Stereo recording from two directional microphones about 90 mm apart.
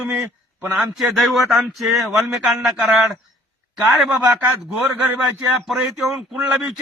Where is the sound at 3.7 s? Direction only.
10° right (ahead or behind).